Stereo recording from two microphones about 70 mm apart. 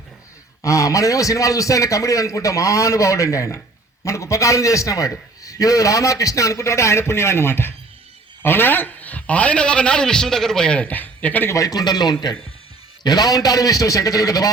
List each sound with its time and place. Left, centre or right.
0.6 s a man's voice: left
11.4 s a man's voice: left